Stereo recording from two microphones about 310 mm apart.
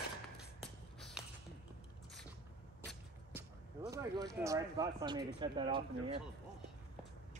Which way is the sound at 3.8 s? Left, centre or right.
Centre.